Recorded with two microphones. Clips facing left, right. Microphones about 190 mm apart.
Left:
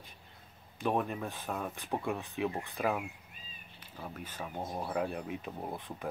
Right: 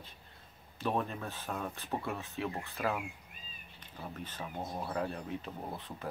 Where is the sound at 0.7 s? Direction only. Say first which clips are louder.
Left 2 dB; 10° left (ahead or behind).